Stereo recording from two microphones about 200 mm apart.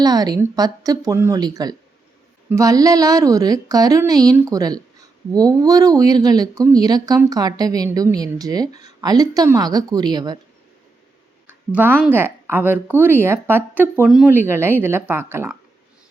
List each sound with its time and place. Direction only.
0.0 s a woman's voice: 20° right (ahead or behind)
11.4 s a woman's voice: 10° right (ahead or behind)